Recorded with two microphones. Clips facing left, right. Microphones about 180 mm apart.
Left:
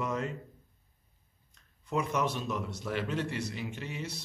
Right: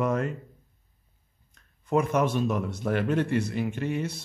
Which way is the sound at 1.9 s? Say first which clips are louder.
Right 7 dB; 50° right (ahead or behind).